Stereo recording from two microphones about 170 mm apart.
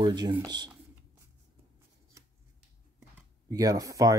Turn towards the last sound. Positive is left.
turn(degrees=-20)  # may be behind; listen again after turning